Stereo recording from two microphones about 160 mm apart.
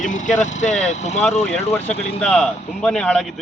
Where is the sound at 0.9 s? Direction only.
45° left (ahead or behind).